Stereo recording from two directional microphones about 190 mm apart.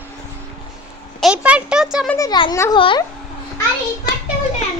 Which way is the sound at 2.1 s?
20° left (ahead or behind).